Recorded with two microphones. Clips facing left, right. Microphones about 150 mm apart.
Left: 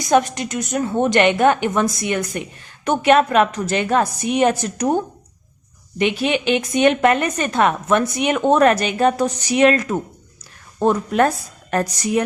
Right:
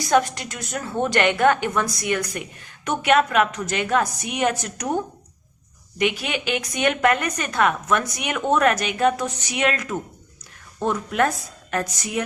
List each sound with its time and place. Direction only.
0.0 s a woman's voice: 20° left (ahead or behind)
6.0 s a woman's voice: 25° left (ahead or behind)